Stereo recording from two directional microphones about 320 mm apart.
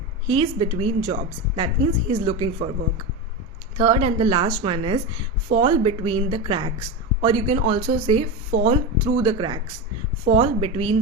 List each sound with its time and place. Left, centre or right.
0.3 s a woman's voice: centre
3.8 s a woman's voice: centre